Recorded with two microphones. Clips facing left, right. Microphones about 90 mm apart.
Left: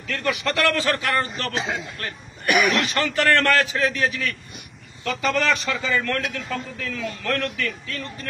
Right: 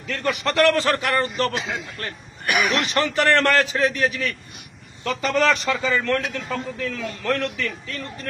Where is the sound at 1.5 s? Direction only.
40° left (ahead or behind).